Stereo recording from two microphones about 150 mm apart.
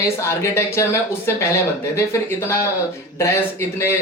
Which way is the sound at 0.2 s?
20° left (ahead or behind).